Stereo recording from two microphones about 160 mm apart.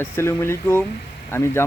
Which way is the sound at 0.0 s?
15° left (ahead or behind).